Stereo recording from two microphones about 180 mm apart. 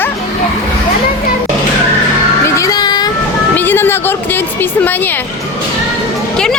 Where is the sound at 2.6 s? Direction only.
20° left (ahead or behind).